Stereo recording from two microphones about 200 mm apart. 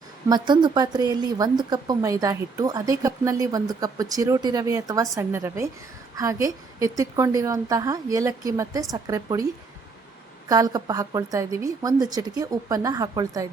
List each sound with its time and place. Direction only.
0.3 s a woman's voice: 20° right (ahead or behind)
10.5 s a woman's voice: 20° right (ahead or behind)